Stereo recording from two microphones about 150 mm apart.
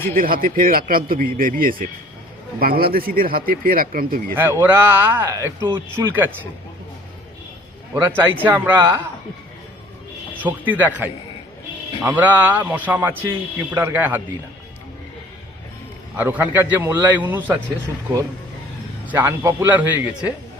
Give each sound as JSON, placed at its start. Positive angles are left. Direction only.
{"t": 0.0, "sound": "a man's voice", "side_deg": -70}
{"t": 4.6, "sound": "a man's voice", "side_deg": -15}
{"t": 7.9, "sound": "a man's voice", "side_deg": -15}
{"t": 10.4, "sound": "a man's voice", "side_deg": -10}
{"t": 16.1, "sound": "a man's voice", "side_deg": -10}
{"t": 19.0, "sound": "a man's voice", "side_deg": -15}